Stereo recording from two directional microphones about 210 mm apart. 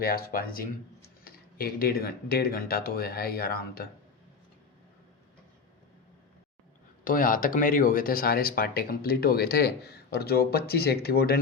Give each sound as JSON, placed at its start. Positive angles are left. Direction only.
{"t": 0.0, "sound": "speech", "side_deg": 45}
{"t": 7.0, "sound": "speech", "side_deg": 40}